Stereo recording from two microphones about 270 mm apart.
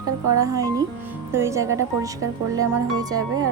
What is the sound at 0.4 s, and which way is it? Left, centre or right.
Speech, centre.